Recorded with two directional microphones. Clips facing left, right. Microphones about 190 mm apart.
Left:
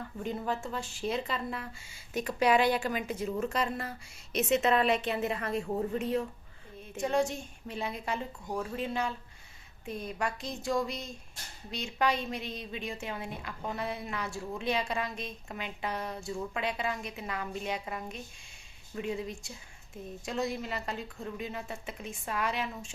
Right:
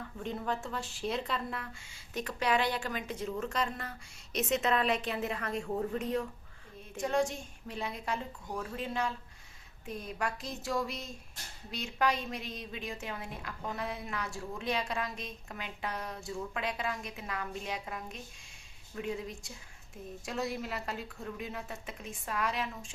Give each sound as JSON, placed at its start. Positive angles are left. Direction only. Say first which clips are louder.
{"t": 0.2, "sound": "a woman's voice", "louder": "left 2 dB", "side_deg": 5}
{"t": 5.6, "sound": "speech", "louder": "right 1 dB", "side_deg": 15}
{"t": 5.9, "sound": "a woman's voice", "louder": "left 2 dB", "side_deg": 5}